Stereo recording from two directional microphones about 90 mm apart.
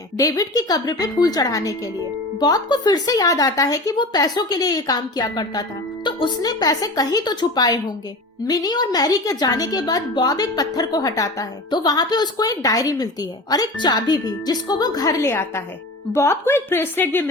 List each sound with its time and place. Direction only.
0.2 s a woman's voice: 40° left (ahead or behind)
3.9 s a woman's voice: 50° left (ahead or behind)
6.1 s a woman's voice: 60° left (ahead or behind); by 17.2 s 25° left (ahead or behind)